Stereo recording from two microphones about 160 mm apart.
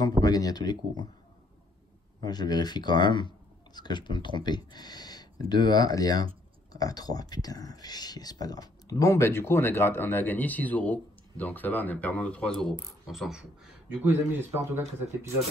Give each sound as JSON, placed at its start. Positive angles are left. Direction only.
{"t": 0.2, "sound": "speech", "side_deg": 25}
{"t": 2.2, "sound": "speech", "side_deg": 25}